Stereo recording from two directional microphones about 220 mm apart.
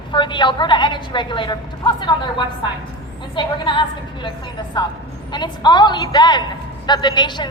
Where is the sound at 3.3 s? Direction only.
20° left (ahead or behind).